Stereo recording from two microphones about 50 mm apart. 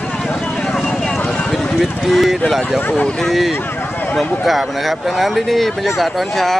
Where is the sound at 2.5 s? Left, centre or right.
Centre.